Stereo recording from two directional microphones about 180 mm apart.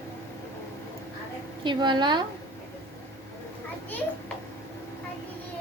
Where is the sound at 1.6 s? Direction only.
25° right (ahead or behind).